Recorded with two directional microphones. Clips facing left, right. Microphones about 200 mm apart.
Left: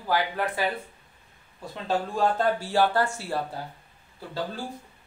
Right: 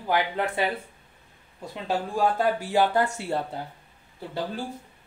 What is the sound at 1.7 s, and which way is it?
Speech, 10° right (ahead or behind).